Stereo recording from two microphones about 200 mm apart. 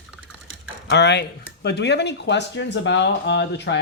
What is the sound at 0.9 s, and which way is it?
Speech, 60° left (ahead or behind).